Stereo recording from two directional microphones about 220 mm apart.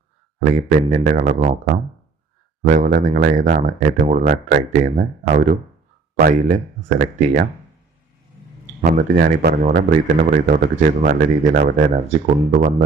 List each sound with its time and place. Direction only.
0.3 s a man's voice: 35° right (ahead or behind)
2.6 s a man's voice: 35° right (ahead or behind)
8.8 s a man's voice: 45° right (ahead or behind)